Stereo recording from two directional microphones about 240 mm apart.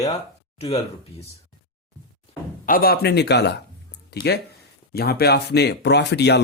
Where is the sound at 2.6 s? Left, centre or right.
Left.